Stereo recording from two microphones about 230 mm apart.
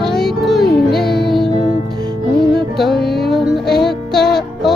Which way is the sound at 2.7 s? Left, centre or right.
Centre.